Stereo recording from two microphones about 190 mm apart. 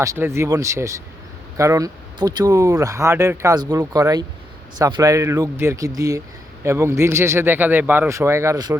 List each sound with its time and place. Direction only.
0.0 s speech: 15° right (ahead or behind)